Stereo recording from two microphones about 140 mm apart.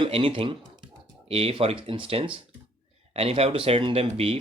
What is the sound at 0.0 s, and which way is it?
Speech, 40° right (ahead or behind).